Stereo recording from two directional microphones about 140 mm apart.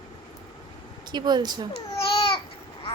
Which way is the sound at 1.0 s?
30° right (ahead or behind).